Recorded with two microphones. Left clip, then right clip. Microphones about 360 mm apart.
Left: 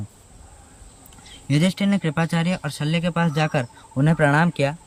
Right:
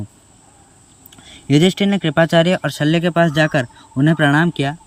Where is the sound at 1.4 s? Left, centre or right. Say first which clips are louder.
Right 8 dB; centre.